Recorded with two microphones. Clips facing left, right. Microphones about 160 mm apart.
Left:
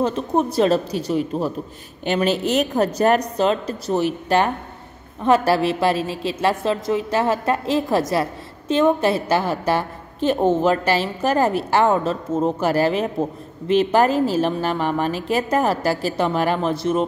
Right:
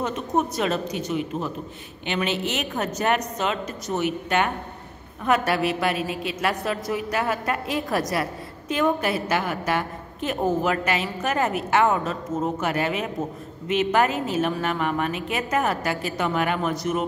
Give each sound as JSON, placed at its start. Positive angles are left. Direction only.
{"t": 0.0, "sound": "a woman's voice", "side_deg": 30}